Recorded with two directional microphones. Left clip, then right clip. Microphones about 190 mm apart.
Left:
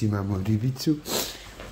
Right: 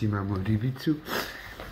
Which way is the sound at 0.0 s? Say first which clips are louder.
Left 2 dB; 25° left (ahead or behind).